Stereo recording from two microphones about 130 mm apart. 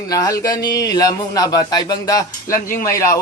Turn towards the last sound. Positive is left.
turn(degrees=20)  # may be behind; listen again after turning